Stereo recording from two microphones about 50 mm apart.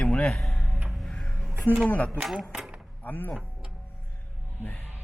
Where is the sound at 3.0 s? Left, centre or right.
Left.